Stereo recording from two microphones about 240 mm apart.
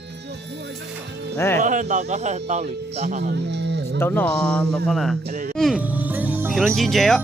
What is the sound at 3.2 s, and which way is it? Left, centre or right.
Speech, right.